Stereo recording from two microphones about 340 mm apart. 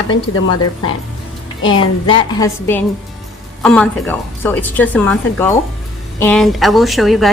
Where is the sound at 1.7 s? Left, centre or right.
Centre.